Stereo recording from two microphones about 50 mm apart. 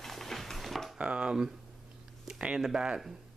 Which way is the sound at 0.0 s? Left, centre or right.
Centre.